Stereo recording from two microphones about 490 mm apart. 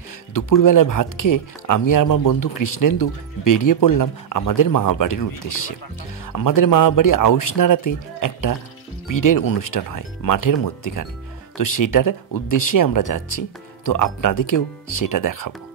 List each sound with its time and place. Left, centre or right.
0.3 s speech: left